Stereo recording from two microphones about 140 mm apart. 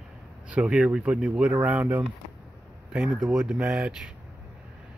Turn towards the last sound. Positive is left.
turn(degrees=-5)  # may be behind; listen again after turning